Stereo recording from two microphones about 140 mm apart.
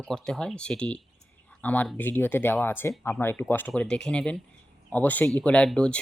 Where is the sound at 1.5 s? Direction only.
10° left (ahead or behind).